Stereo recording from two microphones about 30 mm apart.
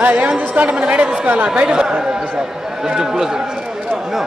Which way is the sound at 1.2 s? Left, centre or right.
Right.